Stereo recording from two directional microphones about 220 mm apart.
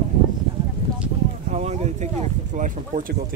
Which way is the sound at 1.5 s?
30° right (ahead or behind).